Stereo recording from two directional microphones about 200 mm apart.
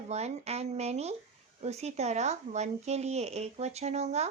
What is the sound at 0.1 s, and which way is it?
Speech, 35° right (ahead or behind).